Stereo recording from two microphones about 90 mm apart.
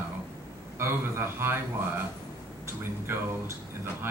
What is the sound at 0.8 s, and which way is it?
Speech, 25° right (ahead or behind).